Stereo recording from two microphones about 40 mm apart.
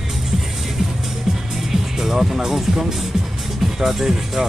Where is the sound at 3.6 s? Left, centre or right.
Centre.